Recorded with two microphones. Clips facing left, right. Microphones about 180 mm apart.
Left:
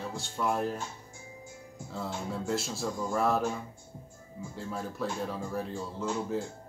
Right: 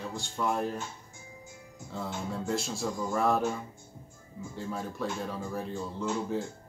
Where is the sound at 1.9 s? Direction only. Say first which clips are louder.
Even; centre (ahead or behind).